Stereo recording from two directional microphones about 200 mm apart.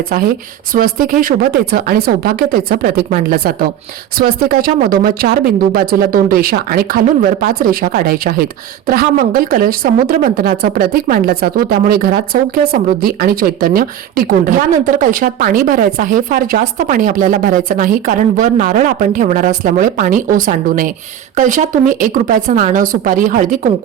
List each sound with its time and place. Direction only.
0.1 s a woman's voice: 50° right (ahead or behind)